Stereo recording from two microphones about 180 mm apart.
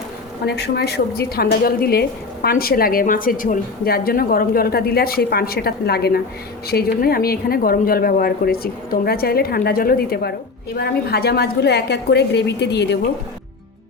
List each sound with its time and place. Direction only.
0.4 s a woman's voice: 65° left (ahead or behind)